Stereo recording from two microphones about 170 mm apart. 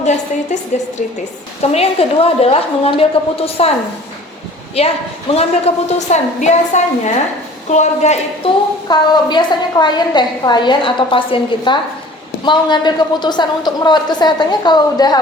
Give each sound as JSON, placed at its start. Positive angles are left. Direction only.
{"t": 0.0, "sound": "a woman's voice", "side_deg": 40}
{"t": 5.3, "sound": "a woman's voice", "side_deg": 35}